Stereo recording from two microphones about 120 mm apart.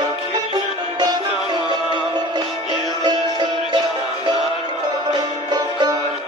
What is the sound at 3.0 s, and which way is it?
Music, 35° right (ahead or behind).